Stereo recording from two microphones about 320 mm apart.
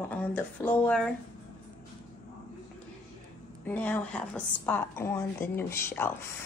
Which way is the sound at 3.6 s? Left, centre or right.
Centre.